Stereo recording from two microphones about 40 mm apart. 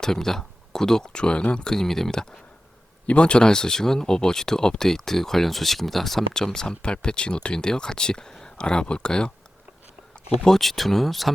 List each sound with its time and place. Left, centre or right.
0.0 s speech: centre
1.1 s speech: left
1.7 s speech: centre
3.1 s speech: left
10.6 s speech: centre